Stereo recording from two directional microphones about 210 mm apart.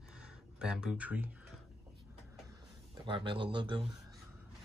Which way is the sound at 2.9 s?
25° right (ahead or behind).